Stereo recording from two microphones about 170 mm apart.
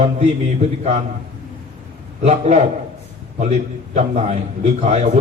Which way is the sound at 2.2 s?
40° right (ahead or behind).